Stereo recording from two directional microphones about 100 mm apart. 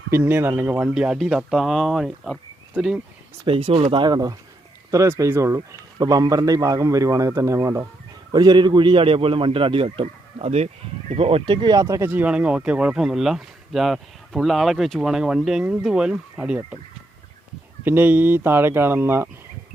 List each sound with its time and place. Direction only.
0.1 s speech: 20° right (ahead or behind)
0.9 s speech: 5° right (ahead or behind)
3.4 s a man's voice: 65° right (ahead or behind)
4.0 s speech: 45° right (ahead or behind)
4.9 s speech: 30° right (ahead or behind)
6.0 s a man's voice: 40° right (ahead or behind)
8.3 s a man's voice: 45° right (ahead or behind); by 9.9 s 60° right (ahead or behind)
10.0 s speech: 85° right
11.1 s a man's voice: 80° right; by 12.0 s 35° right (ahead or behind)
12.0 s speech: 15° right (ahead or behind)
17.8 s speech: 20° right (ahead or behind)